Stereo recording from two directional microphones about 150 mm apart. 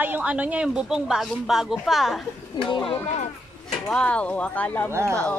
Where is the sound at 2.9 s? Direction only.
45° left (ahead or behind).